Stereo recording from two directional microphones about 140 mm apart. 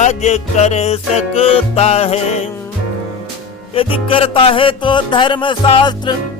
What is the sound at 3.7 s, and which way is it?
Music, 40° left (ahead or behind).